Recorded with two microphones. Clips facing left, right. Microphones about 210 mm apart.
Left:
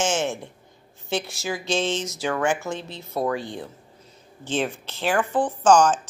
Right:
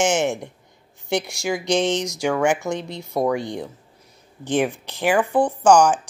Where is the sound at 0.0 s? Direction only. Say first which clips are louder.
Right 4 dB; 15° right (ahead or behind).